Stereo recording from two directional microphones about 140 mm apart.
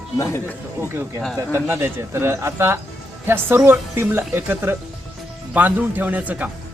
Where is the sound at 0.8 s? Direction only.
15° right (ahead or behind).